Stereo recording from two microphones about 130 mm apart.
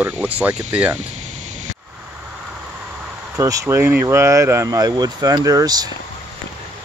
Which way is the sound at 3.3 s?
25° right (ahead or behind).